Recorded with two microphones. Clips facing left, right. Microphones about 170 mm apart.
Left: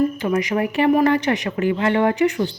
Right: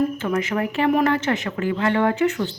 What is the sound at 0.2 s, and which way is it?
Speech, 15° left (ahead or behind).